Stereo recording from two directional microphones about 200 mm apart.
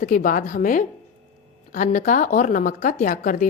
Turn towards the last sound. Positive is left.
turn(degrees=40)  # may be behind; listen again after turning